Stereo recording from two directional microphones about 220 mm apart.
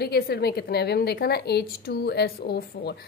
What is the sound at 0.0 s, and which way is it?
A woman's voice, 45° left (ahead or behind).